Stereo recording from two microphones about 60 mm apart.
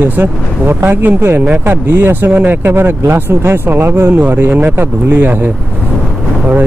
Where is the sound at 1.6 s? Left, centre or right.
Right.